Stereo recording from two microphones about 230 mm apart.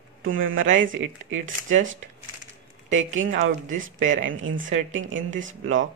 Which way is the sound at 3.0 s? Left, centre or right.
Right.